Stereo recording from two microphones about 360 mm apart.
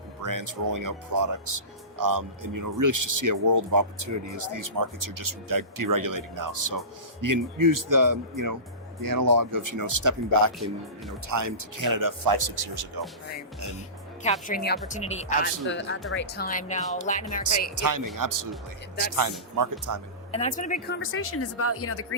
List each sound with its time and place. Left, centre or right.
0.2 s speech: right
14.4 s speech: left
17.7 s speech: right
19.5 s speech: right
20.3 s speech: centre; by 22.0 s left